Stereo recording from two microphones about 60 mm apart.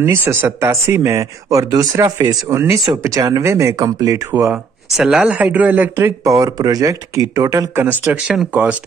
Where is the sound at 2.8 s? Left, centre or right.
Right.